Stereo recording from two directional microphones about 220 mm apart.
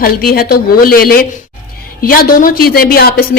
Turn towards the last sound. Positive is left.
turn(degrees=45)  # may be behind; listen again after turning